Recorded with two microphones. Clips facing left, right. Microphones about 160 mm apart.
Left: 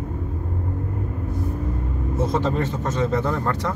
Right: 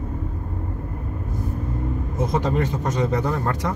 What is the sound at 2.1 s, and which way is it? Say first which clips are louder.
A man's voice: even; 15° right (ahead or behind).